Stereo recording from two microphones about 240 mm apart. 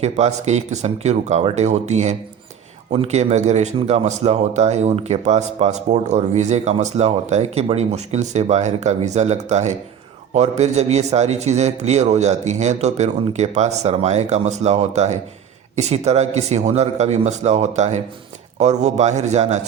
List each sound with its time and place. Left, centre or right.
0.0 s speech: right